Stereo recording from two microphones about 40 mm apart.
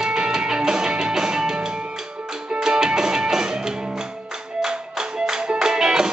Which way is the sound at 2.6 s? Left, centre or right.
Centre.